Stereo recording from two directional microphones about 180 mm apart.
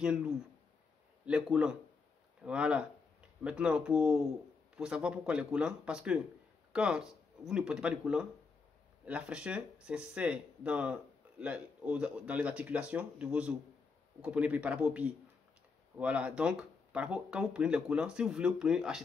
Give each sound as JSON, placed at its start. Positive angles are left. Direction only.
{"t": 0.0, "sound": "speech", "side_deg": -5}